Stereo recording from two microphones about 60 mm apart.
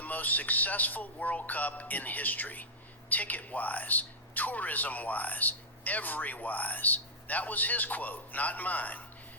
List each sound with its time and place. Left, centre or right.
0.0 s a man's voice: left